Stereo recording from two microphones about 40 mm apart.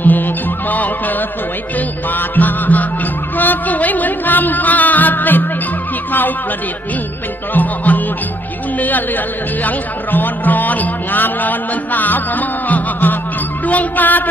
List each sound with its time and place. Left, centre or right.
0.0 s music: left
2.1 s music: left
7.5 s music: left
8.7 s a woman's voice: left